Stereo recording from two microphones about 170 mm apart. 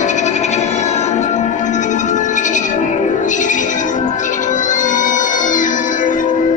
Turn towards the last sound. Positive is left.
turn(degrees=50)  # may be behind; listen again after turning